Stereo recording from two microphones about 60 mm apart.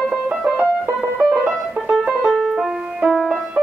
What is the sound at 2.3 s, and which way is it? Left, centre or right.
Music, centre.